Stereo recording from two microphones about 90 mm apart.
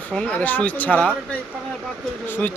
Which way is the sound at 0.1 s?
15° left (ahead or behind).